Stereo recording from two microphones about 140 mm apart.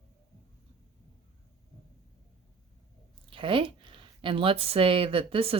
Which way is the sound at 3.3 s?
40° right (ahead or behind).